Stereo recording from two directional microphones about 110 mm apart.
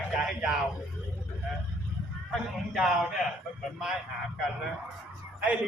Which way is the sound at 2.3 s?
5° right (ahead or behind).